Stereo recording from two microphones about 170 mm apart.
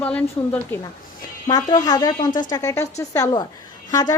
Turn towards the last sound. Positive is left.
turn(degrees=20)  # may be behind; listen again after turning